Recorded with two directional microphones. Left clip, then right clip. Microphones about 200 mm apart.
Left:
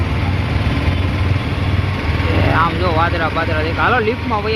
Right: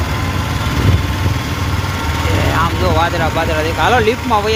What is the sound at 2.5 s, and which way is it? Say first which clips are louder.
Speech: left 1 dB; 15° right (ahead or behind).